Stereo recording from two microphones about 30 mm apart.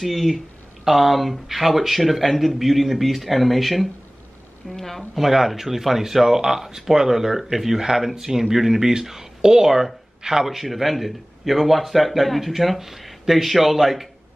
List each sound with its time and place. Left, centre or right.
0.0 s a man's voice: centre
5.1 s speech: centre
9.7 s speech: centre
10.4 s a man's voice: centre